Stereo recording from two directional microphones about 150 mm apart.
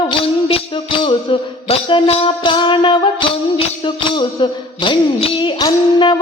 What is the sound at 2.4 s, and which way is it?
Music, 30° left (ahead or behind).